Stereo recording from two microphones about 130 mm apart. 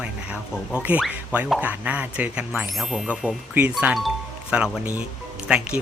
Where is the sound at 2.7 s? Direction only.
Centre (ahead or behind).